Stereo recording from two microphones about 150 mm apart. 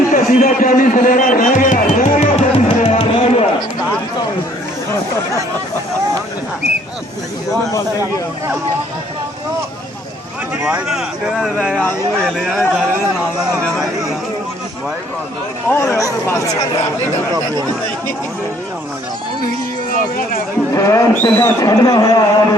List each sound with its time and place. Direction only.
0.1 s music: 65° left (ahead or behind); by 3.4 s 40° left (ahead or behind)
10.7 s speech: 5° right (ahead or behind)
16.0 s speech: 20° left (ahead or behind)
17.3 s speech: 25° right (ahead or behind)
19.9 s speech: 65° left (ahead or behind)
20.7 s speech: 20° left (ahead or behind)